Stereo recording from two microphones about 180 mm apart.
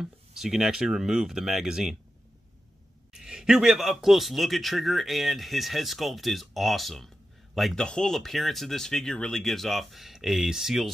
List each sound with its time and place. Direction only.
0.0 s a man's voice: centre (ahead or behind)
3.1 s a man's voice: 5° right (ahead or behind)